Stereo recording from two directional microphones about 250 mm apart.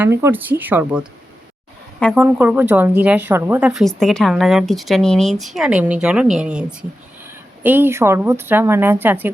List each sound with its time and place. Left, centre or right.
0.0 s a woman's voice: centre
2.2 s a woman's voice: centre